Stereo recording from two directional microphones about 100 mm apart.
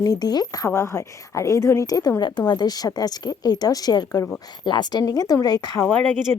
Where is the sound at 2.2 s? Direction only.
50° left (ahead or behind).